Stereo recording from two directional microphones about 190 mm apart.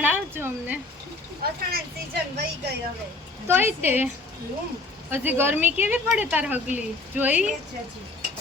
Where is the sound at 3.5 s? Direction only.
10° right (ahead or behind).